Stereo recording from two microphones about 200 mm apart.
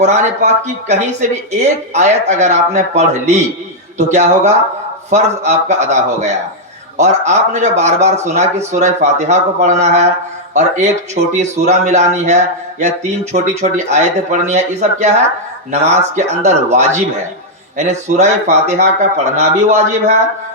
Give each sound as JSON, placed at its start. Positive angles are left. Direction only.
{"t": 0.0, "sound": "a man's voice", "side_deg": -35}